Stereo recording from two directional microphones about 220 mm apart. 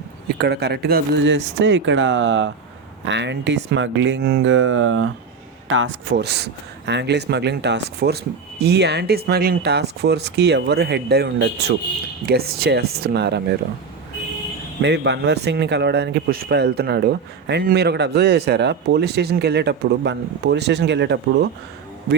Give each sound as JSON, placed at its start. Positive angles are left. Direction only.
{"t": 0.3, "sound": "a man's voice", "side_deg": -50}
{"t": 14.8, "sound": "a man's voice", "side_deg": -50}